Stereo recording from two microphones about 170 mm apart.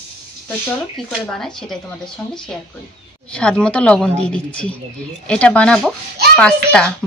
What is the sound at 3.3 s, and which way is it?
A woman's voice, 5° left (ahead or behind).